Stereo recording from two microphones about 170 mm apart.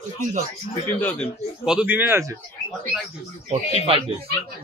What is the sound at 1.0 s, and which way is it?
Speech, 10° left (ahead or behind).